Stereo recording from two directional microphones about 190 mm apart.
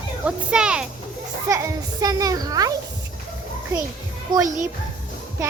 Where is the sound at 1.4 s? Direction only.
15° right (ahead or behind).